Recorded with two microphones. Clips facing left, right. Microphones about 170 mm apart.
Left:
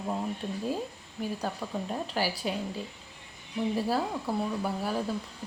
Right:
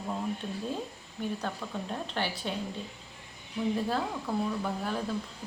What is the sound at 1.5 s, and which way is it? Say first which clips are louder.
A woman's voice: left 2 dB; 5° left (ahead or behind).